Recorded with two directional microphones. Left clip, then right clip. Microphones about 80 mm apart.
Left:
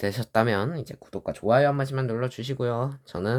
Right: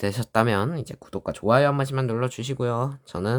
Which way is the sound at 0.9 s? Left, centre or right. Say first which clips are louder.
Right 2 dB; right.